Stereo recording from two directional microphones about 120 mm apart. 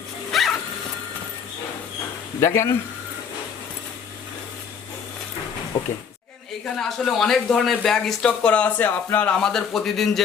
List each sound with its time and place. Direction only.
0.3 s printer: centre (ahead or behind)
2.4 s speech: 25° left (ahead or behind)
6.7 s speech: 5° left (ahead or behind)